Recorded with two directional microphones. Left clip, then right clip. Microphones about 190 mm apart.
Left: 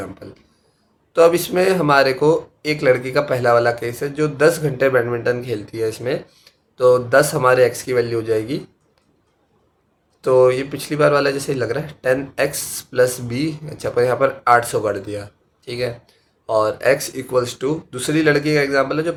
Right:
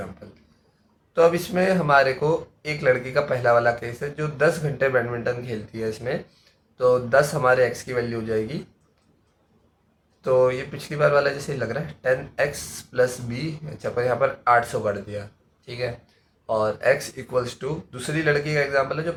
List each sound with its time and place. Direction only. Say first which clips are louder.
1.1 s speech: left 5 dB; 50° left (ahead or behind)
10.2 s speech: left 6 dB; 50° left (ahead or behind)